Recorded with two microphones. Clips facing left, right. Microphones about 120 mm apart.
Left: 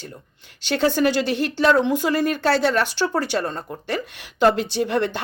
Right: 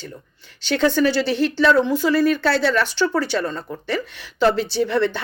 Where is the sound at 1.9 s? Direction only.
50° left (ahead or behind).